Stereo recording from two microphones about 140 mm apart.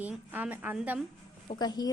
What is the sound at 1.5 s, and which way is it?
Speech, 30° left (ahead or behind).